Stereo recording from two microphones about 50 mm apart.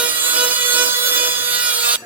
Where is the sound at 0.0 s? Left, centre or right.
Right.